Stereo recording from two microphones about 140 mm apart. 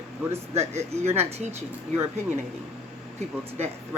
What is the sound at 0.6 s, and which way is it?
Speech, 50° right (ahead or behind).